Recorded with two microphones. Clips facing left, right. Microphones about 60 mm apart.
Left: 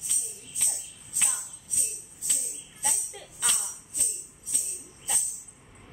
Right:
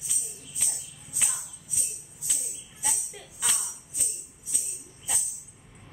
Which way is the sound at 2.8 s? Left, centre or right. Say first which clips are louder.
Left 1 dB; centre.